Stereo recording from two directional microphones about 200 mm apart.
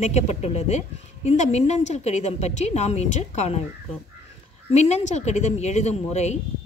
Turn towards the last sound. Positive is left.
turn(degrees=35)  # may be behind; listen again after turning